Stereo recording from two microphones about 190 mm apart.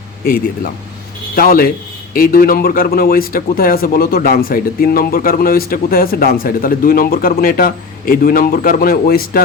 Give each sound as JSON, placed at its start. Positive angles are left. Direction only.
{"t": 0.3, "sound": "a man's voice", "side_deg": 50}